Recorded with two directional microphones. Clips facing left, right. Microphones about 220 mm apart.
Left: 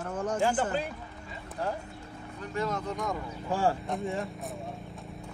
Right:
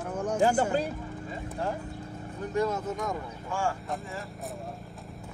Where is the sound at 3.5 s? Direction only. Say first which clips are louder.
Left 4 dB; 35° left (ahead or behind).